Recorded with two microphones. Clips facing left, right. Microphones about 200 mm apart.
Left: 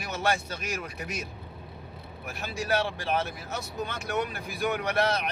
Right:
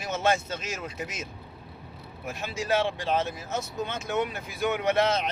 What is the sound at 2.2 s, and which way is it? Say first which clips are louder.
A man's voice: right 2 dB; 20° right (ahead or behind).